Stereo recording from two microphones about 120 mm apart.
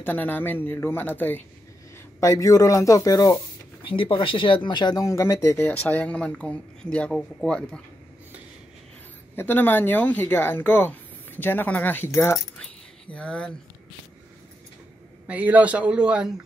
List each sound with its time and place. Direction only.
0.0 s speech: 15° left (ahead or behind)
2.1 s speech: 30° left (ahead or behind)
3.8 s speech: 45° left (ahead or behind); by 7.8 s 10° left (ahead or behind)
9.3 s speech: 20° left (ahead or behind)
13.1 s speech: 10° left (ahead or behind)
15.2 s speech: 15° right (ahead or behind)